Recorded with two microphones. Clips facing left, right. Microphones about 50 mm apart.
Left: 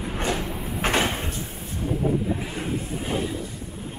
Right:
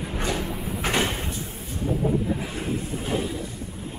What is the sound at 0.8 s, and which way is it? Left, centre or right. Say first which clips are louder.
Sliding door: left 2 dB; left.